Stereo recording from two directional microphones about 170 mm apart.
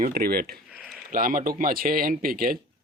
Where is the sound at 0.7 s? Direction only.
5° right (ahead or behind).